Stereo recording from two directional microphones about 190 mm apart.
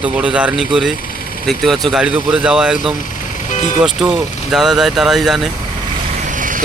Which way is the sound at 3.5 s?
40° left (ahead or behind).